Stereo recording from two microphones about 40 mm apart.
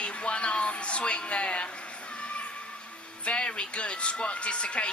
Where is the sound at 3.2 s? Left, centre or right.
Left.